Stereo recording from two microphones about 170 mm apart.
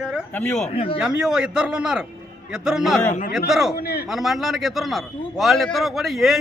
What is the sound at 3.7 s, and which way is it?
Speech, 65° left (ahead or behind).